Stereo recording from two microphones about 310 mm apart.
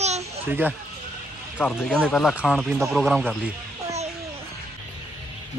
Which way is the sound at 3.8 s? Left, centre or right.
Right.